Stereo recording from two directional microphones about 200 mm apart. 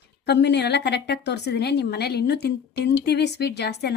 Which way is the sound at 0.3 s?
60° left (ahead or behind).